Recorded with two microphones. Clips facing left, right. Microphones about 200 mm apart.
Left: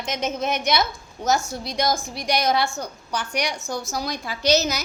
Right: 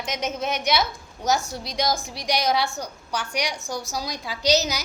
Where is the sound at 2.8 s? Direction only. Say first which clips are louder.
Left 1 dB; 10° right (ahead or behind).